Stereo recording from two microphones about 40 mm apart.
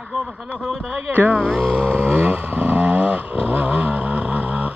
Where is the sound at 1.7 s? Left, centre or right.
Right.